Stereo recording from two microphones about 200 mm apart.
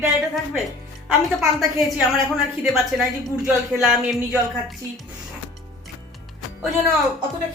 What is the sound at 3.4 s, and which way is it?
Speech, centre (ahead or behind).